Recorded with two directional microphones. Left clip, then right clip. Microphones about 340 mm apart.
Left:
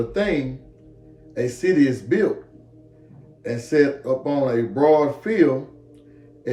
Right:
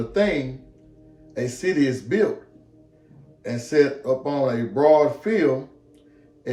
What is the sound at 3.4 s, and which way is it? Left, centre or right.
Speech, centre.